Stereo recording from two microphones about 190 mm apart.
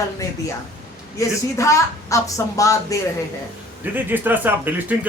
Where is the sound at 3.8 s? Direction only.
10° right (ahead or behind).